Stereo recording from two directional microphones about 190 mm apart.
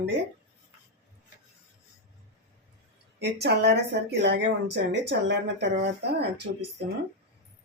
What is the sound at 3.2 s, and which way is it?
Speech, 60° right (ahead or behind).